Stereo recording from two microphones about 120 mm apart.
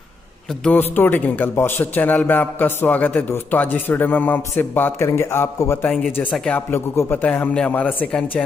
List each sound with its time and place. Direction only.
0.7 s a man's voice: 15° left (ahead or behind)
6.3 s a man's voice: 5° left (ahead or behind)
6.7 s a man's voice: 20° left (ahead or behind)